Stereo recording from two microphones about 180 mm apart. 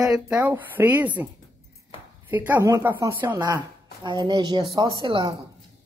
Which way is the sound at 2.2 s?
10° right (ahead or behind).